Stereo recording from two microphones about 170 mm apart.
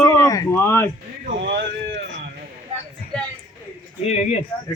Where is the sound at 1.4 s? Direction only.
90° right.